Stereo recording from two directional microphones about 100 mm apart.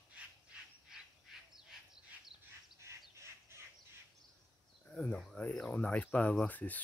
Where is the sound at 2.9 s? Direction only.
30° right (ahead or behind).